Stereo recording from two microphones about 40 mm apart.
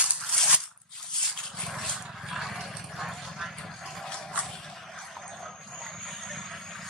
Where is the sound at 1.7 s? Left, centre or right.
Centre.